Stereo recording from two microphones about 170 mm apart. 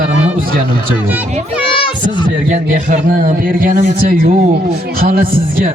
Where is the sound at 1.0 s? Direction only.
10° right (ahead or behind).